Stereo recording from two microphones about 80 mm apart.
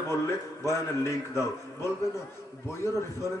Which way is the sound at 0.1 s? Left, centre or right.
Left.